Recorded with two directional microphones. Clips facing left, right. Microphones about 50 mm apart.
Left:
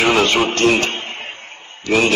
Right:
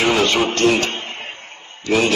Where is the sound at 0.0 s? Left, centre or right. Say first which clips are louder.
Left 2 dB; left.